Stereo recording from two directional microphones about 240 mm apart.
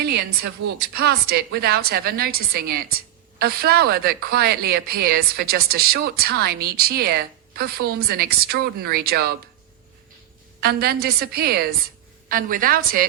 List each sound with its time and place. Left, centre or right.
0.7 s a woman's voice: right
10.6 s a woman's voice: right